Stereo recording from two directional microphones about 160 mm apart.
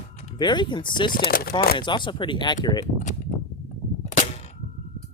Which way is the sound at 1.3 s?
70° left (ahead or behind).